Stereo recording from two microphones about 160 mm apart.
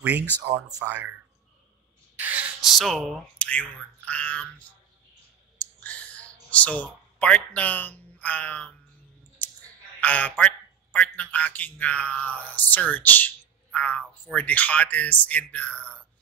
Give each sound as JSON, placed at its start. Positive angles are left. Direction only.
{"t": 0.0, "sound": "speech", "side_deg": -10}
{"t": 2.1, "sound": "a sound", "side_deg": -10}
{"t": 2.8, "sound": "a man's voice", "side_deg": 0}
{"t": 5.9, "sound": "clicking", "side_deg": 10}
{"t": 6.5, "sound": "a man's voice", "side_deg": 10}
{"t": 9.9, "sound": "a man's voice", "side_deg": 10}